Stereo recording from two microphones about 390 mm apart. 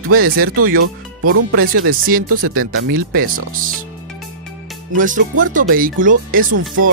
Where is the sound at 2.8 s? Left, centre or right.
Right.